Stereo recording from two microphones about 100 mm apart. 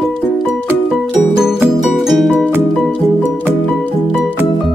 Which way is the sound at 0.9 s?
5° right (ahead or behind).